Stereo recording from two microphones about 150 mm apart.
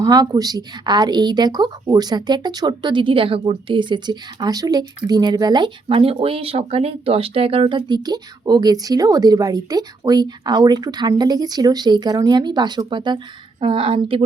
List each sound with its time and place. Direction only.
0.0 s a woman's voice: 25° right (ahead or behind)